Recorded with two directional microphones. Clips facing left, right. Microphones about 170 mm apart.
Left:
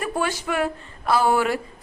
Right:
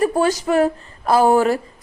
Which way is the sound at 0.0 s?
40° right (ahead or behind).